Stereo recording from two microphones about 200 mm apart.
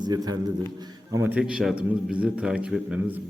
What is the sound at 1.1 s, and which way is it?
A man's voice, 10° right (ahead or behind).